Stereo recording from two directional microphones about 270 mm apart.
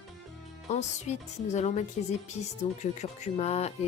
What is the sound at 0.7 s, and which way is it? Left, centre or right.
A woman's voice, left.